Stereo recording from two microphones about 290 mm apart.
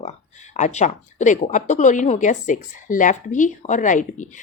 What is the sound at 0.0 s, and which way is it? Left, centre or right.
Speech, left.